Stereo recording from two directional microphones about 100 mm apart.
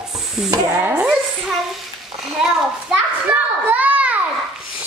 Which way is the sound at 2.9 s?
15° right (ahead or behind).